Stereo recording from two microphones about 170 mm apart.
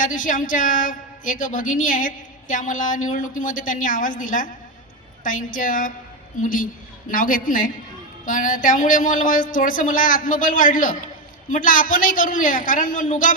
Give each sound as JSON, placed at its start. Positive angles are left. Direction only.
{"t": 0.0, "sound": "a woman's voice", "side_deg": 50}